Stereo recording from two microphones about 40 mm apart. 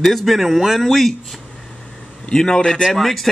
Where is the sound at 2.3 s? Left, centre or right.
Centre.